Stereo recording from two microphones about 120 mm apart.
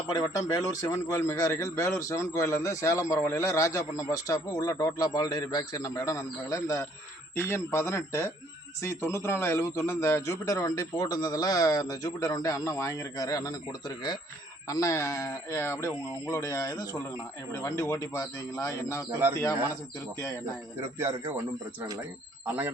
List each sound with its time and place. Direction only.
0.1 s a man's voice: 30° left (ahead or behind)
20.8 s speech: 20° right (ahead or behind)